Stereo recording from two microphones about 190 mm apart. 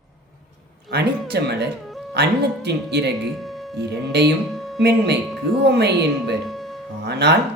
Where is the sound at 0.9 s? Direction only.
60° right (ahead or behind).